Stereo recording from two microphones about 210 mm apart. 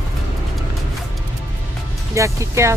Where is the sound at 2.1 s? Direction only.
15° right (ahead or behind).